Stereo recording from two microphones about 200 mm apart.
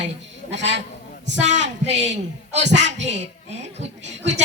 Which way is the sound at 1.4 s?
35° right (ahead or behind).